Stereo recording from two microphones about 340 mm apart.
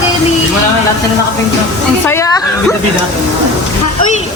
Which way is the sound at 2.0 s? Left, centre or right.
Centre.